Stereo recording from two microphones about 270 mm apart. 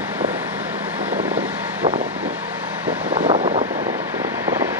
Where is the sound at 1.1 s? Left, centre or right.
Right.